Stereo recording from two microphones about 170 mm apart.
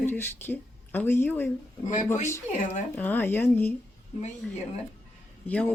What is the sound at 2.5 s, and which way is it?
Speech, 45° left (ahead or behind).